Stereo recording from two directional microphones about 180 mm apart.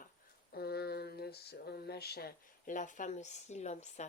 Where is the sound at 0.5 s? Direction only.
60° left (ahead or behind).